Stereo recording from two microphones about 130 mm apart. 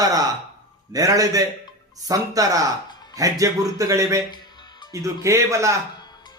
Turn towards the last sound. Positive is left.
turn(degrees=-25)  # may be behind; listen again after turning